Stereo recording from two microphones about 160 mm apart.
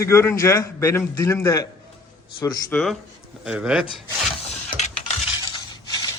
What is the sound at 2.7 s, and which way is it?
A man's voice, 5° left (ahead or behind).